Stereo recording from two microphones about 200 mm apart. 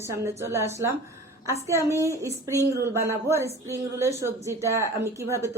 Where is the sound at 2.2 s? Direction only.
15° right (ahead or behind).